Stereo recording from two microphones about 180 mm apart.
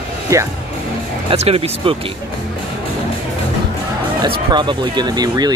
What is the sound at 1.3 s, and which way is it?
Speech, 35° right (ahead or behind).